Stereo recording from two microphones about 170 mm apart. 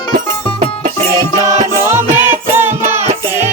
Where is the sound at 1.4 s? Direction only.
15° right (ahead or behind).